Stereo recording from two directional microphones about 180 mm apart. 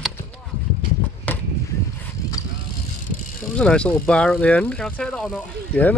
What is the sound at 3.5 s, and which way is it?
Speech, 5° left (ahead or behind).